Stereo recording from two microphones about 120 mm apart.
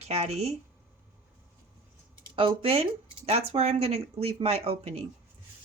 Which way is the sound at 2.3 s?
50° right (ahead or behind).